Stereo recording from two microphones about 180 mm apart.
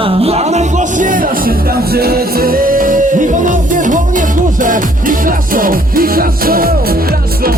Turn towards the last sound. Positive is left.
turn(degrees=-55)  # may be behind; listen again after turning